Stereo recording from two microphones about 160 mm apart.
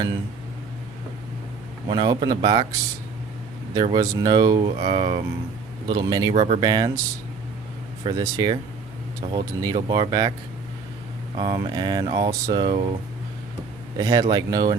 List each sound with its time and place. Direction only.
1.9 s speech: 25° right (ahead or behind)
3.8 s speech: 25° right (ahead or behind)
4.8 s speech: 35° right (ahead or behind)
5.9 s speech: 25° right (ahead or behind)
6.3 s speech: 40° right (ahead or behind)
6.6 s speech: 25° right (ahead or behind)
8.0 s speech: 25° right (ahead or behind)
11.3 s speech: 25° right (ahead or behind)
14.0 s speech: 25° right (ahead or behind)